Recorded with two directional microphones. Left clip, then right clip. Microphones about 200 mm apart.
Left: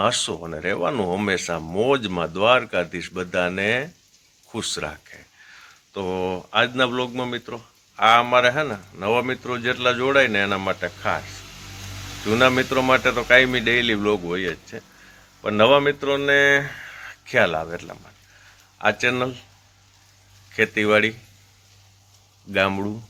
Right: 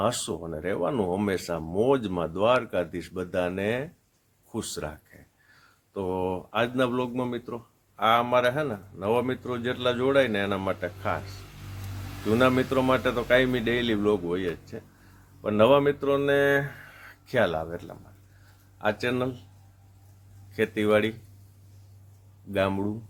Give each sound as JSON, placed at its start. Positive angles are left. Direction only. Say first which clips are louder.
{"t": 0.0, "sound": "speech", "louder": "left 6 dB", "side_deg": 5}
{"t": 12.3, "sound": "speech", "louder": "left 5 dB", "side_deg": 10}
{"t": 20.5, "sound": "speech", "louder": "left 5 dB", "side_deg": 10}
{"t": 22.5, "sound": "speech", "louder": "left 5 dB", "side_deg": 10}